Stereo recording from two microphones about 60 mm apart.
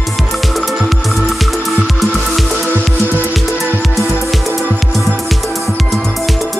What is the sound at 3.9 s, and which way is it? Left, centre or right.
Music, centre.